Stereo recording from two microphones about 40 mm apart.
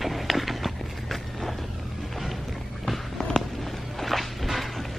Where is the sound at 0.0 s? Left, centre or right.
Centre.